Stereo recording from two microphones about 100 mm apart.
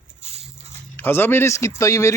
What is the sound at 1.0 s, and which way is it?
Speech, 20° left (ahead or behind).